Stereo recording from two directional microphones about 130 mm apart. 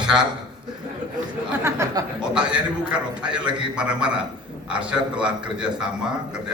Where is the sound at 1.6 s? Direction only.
20° right (ahead or behind).